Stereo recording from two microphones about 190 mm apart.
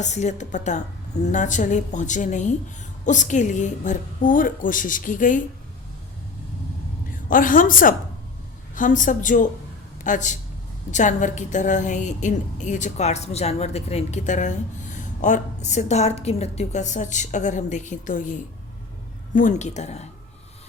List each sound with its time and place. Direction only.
0.0 s a woman's voice: 40° left (ahead or behind)
7.3 s a woman's voice: 45° left (ahead or behind)